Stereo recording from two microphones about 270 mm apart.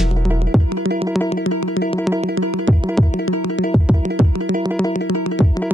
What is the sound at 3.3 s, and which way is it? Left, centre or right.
Music, left.